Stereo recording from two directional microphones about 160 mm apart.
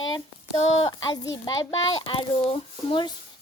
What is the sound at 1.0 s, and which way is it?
A child's voice, 25° left (ahead or behind).